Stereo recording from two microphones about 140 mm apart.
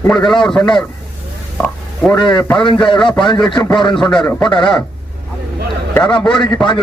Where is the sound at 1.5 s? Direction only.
10° left (ahead or behind).